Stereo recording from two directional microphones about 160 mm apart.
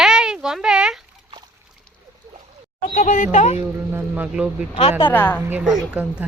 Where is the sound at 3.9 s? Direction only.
10° right (ahead or behind).